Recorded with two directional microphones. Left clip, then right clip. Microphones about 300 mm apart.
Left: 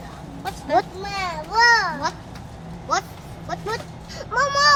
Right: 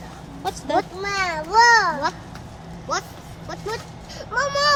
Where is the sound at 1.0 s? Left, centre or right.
Right.